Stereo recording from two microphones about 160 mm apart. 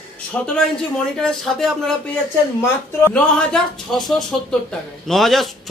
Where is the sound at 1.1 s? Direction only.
Centre (ahead or behind).